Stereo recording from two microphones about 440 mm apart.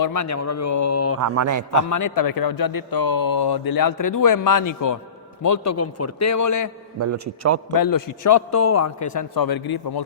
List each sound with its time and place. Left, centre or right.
0.0 s a man's voice: left
1.2 s a man's voice: right
1.7 s a man's voice: left
7.0 s a man's voice: right
7.7 s a man's voice: left
9.1 s a man's voice: left